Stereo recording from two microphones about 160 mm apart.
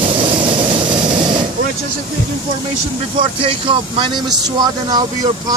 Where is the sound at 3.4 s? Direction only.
35° right (ahead or behind).